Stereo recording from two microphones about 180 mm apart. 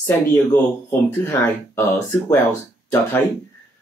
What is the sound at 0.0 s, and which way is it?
Speech, 15° left (ahead or behind).